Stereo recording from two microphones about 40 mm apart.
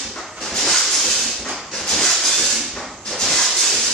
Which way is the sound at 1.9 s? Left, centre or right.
Centre.